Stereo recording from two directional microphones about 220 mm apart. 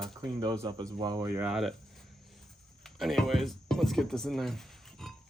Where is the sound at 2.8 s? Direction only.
Centre (ahead or behind).